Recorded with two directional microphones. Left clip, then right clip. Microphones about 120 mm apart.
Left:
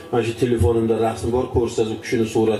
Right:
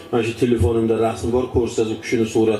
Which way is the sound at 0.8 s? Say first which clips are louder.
Right 1 dB; 35° right (ahead or behind).